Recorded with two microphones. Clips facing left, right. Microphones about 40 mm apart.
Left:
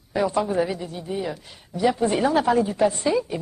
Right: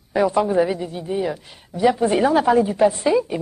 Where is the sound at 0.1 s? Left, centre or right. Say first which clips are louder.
Right 4 dB; centre.